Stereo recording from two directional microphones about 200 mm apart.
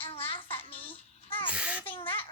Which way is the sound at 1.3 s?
25° left (ahead or behind).